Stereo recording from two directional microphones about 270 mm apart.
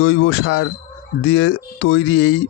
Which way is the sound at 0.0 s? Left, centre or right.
Left.